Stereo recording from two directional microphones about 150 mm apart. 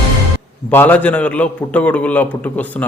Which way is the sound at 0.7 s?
10° left (ahead or behind).